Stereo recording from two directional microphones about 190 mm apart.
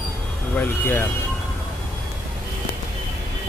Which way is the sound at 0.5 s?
10° left (ahead or behind).